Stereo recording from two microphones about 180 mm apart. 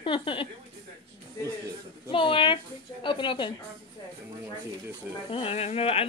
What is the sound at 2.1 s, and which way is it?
Speech, 30° left (ahead or behind).